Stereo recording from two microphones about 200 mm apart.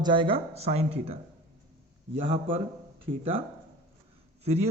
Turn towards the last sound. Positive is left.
turn(degrees=-30)  # may be behind; listen again after turning